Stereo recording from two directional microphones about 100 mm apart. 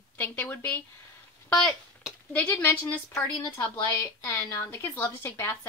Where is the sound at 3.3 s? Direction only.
45° left (ahead or behind).